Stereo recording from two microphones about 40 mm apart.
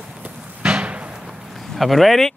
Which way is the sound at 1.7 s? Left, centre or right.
Centre.